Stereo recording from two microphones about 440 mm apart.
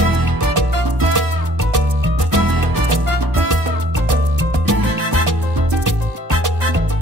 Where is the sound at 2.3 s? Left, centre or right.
Right.